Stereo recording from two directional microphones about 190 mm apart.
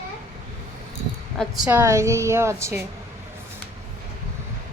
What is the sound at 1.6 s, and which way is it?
A woman's voice, 15° right (ahead or behind).